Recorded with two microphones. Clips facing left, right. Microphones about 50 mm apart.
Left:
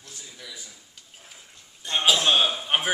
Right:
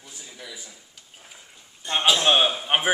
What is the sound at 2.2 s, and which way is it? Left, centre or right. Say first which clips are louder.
Speech: right 2 dB; centre.